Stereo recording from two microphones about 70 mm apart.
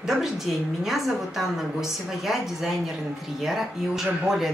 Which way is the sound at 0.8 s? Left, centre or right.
Centre.